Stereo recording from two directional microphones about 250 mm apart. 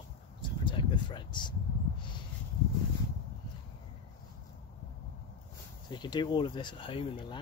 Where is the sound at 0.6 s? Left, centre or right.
Centre.